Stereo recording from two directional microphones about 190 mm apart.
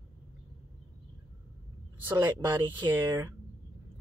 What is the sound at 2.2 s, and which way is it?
Speech, 25° right (ahead or behind).